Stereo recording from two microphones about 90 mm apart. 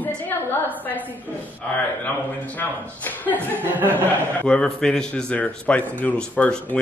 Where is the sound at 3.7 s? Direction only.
20° right (ahead or behind).